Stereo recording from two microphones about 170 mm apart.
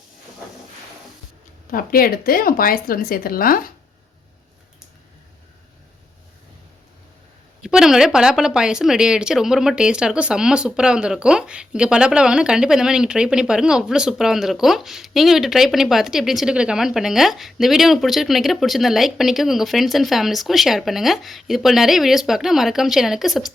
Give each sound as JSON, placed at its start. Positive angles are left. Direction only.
{"t": 1.7, "sound": "speech", "side_deg": 60}
{"t": 7.6, "sound": "speech", "side_deg": -5}